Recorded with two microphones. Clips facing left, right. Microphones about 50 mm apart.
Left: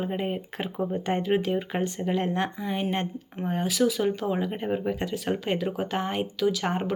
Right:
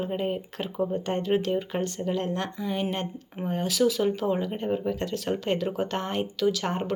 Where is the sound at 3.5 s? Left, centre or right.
Centre.